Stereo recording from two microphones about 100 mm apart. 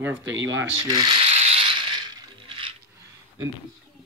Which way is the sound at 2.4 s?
60° right (ahead or behind).